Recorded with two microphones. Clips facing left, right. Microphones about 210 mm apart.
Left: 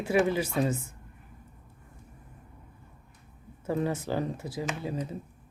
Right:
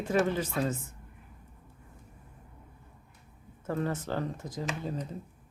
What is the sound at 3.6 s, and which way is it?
Speech, 10° left (ahead or behind).